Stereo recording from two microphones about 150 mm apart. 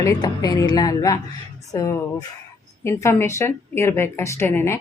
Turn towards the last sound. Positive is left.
turn(degrees=15)  # may be behind; listen again after turning